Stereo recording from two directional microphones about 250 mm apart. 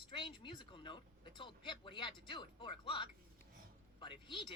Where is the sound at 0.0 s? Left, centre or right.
Centre.